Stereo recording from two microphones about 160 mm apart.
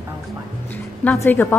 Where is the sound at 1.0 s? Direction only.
10° left (ahead or behind).